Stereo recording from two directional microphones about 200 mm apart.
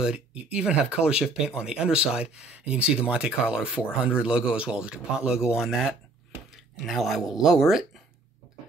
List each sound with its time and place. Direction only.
0.0 s speech: 5° right (ahead or behind)